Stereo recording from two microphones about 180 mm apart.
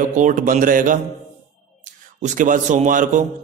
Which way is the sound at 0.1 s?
45° right (ahead or behind).